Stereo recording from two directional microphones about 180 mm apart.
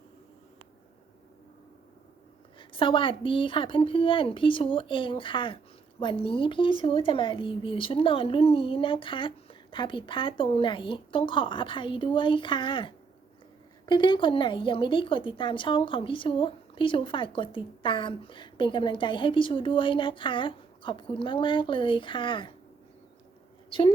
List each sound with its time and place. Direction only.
2.6 s a woman's voice: 30° left (ahead or behind)